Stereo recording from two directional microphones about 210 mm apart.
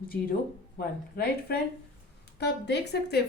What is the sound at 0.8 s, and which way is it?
A woman's voice, 45° left (ahead or behind).